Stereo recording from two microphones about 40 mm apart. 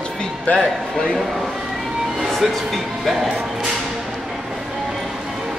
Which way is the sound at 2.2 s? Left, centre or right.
Centre.